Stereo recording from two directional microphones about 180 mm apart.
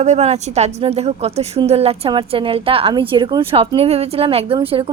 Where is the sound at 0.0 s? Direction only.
40° right (ahead or behind).